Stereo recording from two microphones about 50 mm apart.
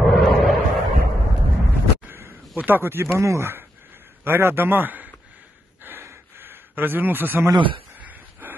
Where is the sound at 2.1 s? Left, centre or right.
Right.